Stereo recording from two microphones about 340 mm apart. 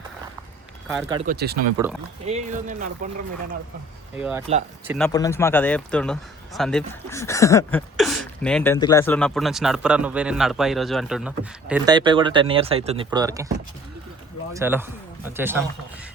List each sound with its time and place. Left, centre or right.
1.1 s speech: right
4.2 s speech: centre
14.5 s speech: centre